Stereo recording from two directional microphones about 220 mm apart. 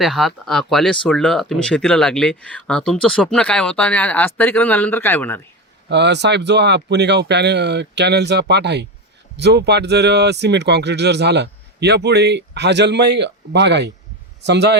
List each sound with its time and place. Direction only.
0.0 s speech: centre (ahead or behind)
5.9 s speech: 50° right (ahead or behind)